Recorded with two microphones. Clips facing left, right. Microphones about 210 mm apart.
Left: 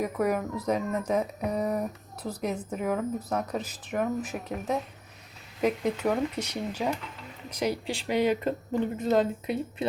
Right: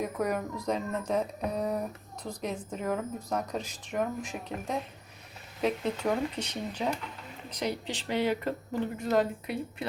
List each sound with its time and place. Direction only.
0.0 s speech: 5° left (ahead or behind); by 9.8 s 20° left (ahead or behind)